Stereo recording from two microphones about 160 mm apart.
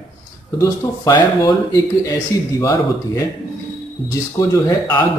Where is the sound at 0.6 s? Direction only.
20° left (ahead or behind).